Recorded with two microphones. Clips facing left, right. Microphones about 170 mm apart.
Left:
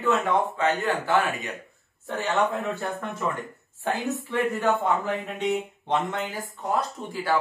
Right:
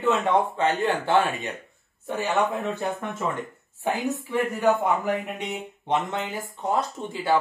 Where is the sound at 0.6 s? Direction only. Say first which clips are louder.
Right 1 dB; 30° right (ahead or behind).